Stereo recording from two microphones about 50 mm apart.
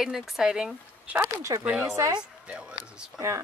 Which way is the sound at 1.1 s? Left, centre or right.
Right.